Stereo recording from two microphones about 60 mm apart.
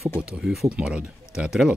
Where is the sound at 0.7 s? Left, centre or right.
Centre.